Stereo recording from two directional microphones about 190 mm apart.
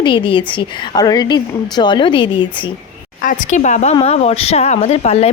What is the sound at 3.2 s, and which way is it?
A woman's voice, 40° left (ahead or behind).